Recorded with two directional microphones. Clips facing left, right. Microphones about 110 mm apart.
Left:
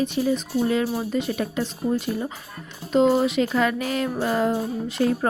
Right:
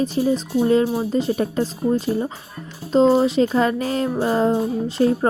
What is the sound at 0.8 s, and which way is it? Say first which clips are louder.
Speech: right 4 dB; 20° right (ahead or behind).